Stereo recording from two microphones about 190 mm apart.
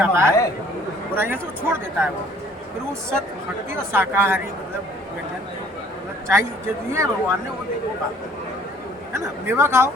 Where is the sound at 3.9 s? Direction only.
10° right (ahead or behind).